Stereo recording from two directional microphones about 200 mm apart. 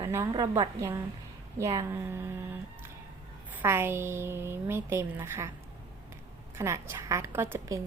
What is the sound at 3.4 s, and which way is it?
A woman's voice, 10° right (ahead or behind).